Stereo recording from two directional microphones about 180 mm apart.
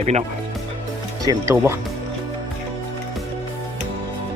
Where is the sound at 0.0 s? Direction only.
40° right (ahead or behind).